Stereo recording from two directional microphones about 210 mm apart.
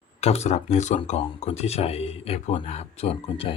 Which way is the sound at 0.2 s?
30° left (ahead or behind).